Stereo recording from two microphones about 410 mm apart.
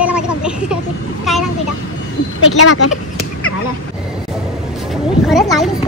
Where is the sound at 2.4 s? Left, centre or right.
Left.